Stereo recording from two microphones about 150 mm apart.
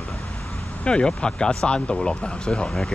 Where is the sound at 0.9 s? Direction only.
5° left (ahead or behind).